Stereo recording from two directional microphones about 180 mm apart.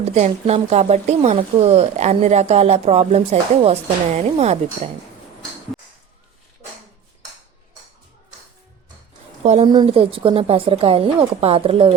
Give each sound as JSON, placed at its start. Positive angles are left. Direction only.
{"t": 0.0, "sound": "a woman's voice", "side_deg": -35}
{"t": 5.7, "sound": "a sound", "side_deg": 0}
{"t": 9.4, "sound": "a woman's voice", "side_deg": -35}
{"t": 9.6, "sound": "a woman's voice", "side_deg": -25}